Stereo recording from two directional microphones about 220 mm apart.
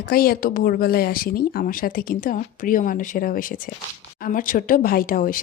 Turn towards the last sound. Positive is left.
turn(degrees=40)  # may be behind; listen again after turning